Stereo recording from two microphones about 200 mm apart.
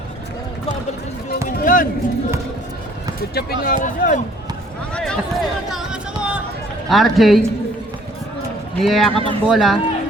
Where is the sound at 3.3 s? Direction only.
50° left (ahead or behind).